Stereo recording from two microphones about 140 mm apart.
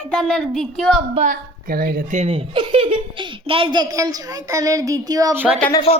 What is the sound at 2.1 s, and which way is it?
A child's voice, 45° right (ahead or behind).